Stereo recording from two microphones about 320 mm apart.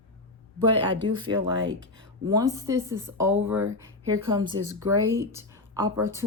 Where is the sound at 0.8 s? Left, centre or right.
Centre.